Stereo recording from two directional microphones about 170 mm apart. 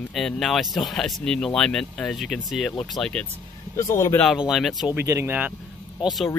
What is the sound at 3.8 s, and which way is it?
Speech, 15° left (ahead or behind).